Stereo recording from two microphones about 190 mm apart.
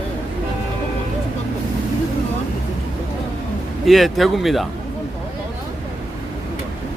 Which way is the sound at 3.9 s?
Centre (ahead or behind).